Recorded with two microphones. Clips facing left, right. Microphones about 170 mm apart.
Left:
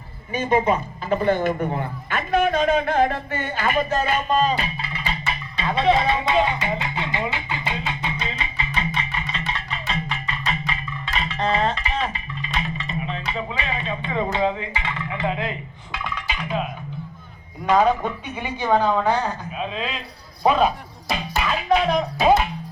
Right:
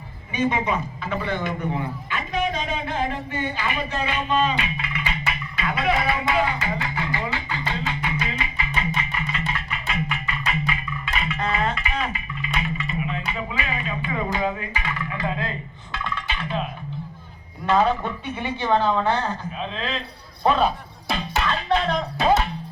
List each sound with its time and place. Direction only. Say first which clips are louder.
0.3 s a man's voice: left 3 dB; 40° left (ahead or behind); by 8.1 s 20° left (ahead or behind)
8.2 s music: right 1 dB; 25° left (ahead or behind); by 16.6 s 10° left (ahead or behind)
17.7 s a woman's voice: left 2 dB; 10° left (ahead or behind)
21.2 s music: even; 10° left (ahead or behind)